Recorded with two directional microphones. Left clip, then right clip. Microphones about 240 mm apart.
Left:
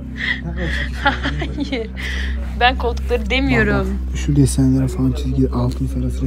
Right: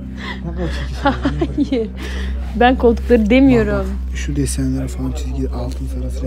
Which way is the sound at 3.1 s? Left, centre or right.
Right.